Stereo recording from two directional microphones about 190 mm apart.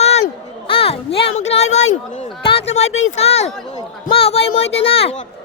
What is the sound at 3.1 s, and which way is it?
Speech, 35° left (ahead or behind).